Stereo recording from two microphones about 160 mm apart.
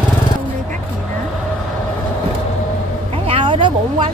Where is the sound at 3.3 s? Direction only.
30° right (ahead or behind).